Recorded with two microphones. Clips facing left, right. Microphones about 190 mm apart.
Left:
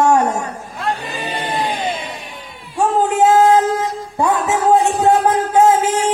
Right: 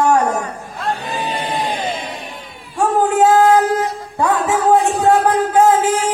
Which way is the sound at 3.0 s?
20° left (ahead or behind).